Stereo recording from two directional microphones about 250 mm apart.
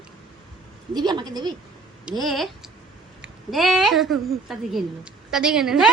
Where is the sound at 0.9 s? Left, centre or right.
Centre.